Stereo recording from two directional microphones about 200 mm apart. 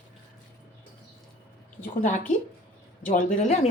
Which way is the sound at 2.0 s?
40° left (ahead or behind).